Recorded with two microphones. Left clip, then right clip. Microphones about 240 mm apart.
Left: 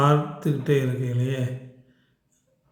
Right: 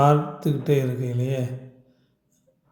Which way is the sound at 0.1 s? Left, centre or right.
Centre.